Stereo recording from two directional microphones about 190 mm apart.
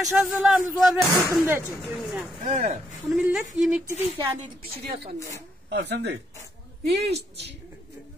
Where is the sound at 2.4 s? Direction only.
40° right (ahead or behind).